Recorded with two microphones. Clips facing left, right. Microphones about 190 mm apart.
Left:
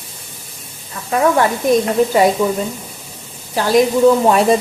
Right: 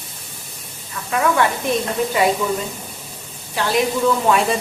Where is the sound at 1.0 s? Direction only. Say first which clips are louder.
Left 4 dB; 35° left (ahead or behind).